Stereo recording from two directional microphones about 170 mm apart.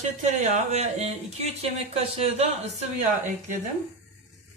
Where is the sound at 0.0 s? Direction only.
45° right (ahead or behind).